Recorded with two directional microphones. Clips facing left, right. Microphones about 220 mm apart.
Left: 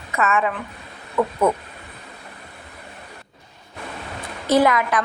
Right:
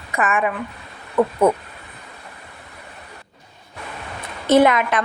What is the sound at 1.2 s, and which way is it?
Speech, 30° right (ahead or behind).